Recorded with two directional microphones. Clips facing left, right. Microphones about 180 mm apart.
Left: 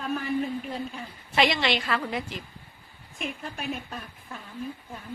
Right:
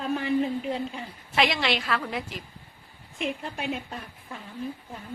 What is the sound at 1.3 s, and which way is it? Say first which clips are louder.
Speech: left 1 dB; centre (ahead or behind).